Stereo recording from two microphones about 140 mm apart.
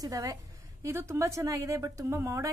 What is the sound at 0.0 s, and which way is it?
A woman's voice, 25° right (ahead or behind).